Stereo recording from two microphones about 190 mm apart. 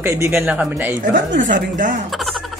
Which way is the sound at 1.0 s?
45° right (ahead or behind).